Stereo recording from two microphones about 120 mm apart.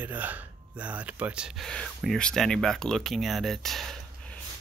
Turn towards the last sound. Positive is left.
turn(degrees=0)  # may be behind; listen again after turning